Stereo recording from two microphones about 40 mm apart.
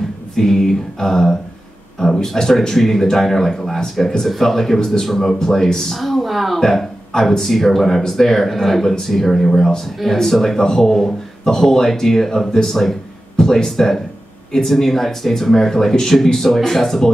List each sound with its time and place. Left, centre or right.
0.4 s speech: centre
4.7 s speech: centre
13.4 s a sound: centre
13.7 s speech: centre